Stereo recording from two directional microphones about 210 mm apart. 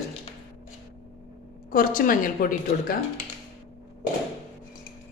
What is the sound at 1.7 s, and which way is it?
A woman's voice, 45° left (ahead or behind).